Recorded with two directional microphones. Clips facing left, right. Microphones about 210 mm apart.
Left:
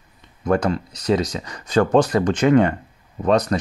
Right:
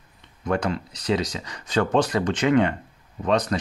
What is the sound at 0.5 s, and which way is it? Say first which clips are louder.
Speech: left 5 dB; 45° left (ahead or behind).